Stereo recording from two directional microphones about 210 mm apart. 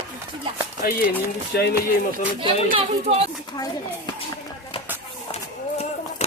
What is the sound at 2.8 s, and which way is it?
Speech, 30° right (ahead or behind).